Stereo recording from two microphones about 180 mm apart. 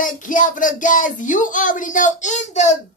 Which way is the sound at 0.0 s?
45° left (ahead or behind).